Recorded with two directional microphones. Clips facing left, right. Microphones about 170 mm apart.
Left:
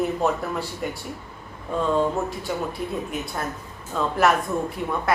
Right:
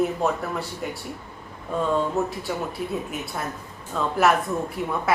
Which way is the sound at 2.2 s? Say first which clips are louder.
Left 1 dB; centre (ahead or behind).